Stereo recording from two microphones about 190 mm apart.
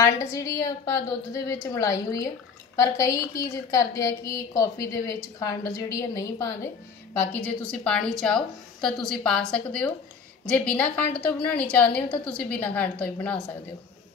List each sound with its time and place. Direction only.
0.0 s a woman's voice: 15° left (ahead or behind)
7.2 s a woman's voice: 5° left (ahead or behind)